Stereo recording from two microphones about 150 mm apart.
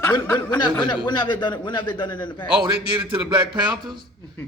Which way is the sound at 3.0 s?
35° right (ahead or behind).